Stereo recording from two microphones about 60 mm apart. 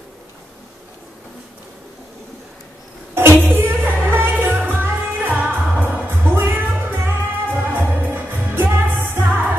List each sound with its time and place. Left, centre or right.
3.2 s music: right